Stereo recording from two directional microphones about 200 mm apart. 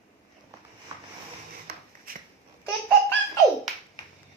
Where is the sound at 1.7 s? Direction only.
50° right (ahead or behind).